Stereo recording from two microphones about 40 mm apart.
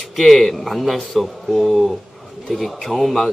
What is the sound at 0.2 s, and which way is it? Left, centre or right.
A man's voice, centre.